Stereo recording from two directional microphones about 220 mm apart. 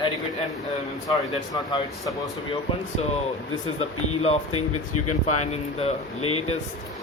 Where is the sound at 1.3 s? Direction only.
20° left (ahead or behind).